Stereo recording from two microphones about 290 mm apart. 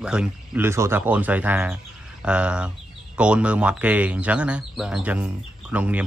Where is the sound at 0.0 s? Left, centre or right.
Centre.